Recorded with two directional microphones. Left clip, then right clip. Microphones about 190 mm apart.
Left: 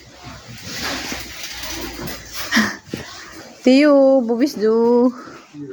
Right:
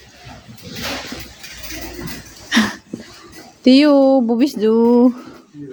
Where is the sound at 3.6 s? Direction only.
20° right (ahead or behind).